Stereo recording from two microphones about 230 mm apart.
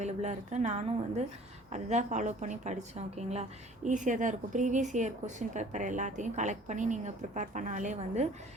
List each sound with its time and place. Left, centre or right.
0.0 s speech: right